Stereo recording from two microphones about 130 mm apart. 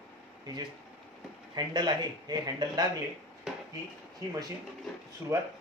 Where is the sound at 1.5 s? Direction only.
30° right (ahead or behind).